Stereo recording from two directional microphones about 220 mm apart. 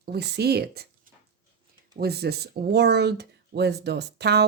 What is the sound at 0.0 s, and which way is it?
Speech, 45° right (ahead or behind).